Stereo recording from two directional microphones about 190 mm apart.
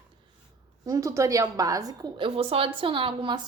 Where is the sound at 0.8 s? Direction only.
15° right (ahead or behind).